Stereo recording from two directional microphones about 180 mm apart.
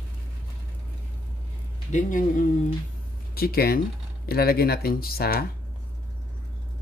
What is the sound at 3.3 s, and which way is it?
Speech, 55° left (ahead or behind).